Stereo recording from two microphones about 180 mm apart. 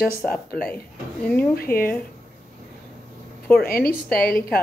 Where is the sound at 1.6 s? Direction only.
55° left (ahead or behind).